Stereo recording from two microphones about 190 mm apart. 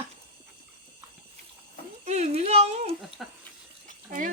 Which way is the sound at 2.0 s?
35° right (ahead or behind).